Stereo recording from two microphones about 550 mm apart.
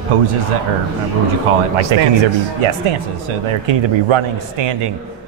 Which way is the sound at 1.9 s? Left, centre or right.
Right.